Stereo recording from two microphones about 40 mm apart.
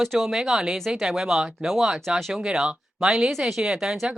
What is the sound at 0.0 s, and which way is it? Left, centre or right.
Speech, centre.